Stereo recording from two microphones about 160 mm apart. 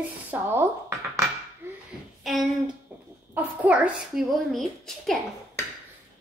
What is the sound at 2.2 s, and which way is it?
Speech, centre (ahead or behind).